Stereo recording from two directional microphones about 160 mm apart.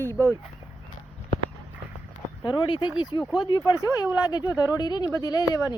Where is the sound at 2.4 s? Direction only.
30° left (ahead or behind).